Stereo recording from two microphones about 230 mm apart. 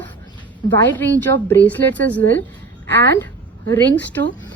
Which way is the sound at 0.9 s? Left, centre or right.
Centre.